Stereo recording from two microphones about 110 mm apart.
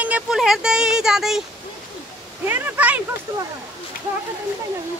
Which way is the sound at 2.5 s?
15° right (ahead or behind).